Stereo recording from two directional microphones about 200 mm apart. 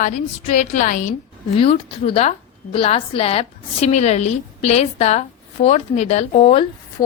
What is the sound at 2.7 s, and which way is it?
A woman's voice, 30° left (ahead or behind).